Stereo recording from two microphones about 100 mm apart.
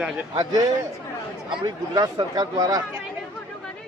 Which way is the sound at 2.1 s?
40° right (ahead or behind).